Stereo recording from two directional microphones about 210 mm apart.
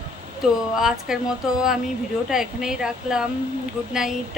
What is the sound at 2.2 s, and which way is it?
A woman's voice, centre (ahead or behind).